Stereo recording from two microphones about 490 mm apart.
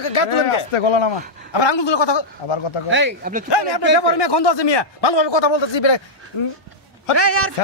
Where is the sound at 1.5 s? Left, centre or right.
Left.